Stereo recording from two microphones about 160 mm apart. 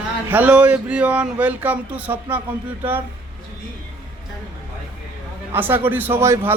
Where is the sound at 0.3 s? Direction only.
10° right (ahead or behind).